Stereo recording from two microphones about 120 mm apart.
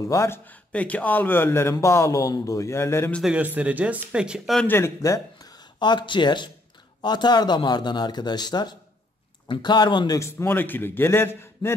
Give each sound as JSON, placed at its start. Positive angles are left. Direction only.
{"t": 0.1, "sound": "speech", "side_deg": 20}
{"t": 3.3, "sound": "speech", "side_deg": -10}
{"t": 4.6, "sound": "speech", "side_deg": 20}
{"t": 10.1, "sound": "speech", "side_deg": 20}